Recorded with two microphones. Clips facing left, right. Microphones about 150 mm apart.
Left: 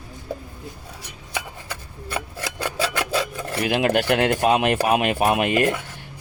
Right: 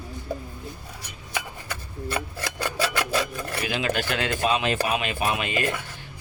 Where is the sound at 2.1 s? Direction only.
10° left (ahead or behind).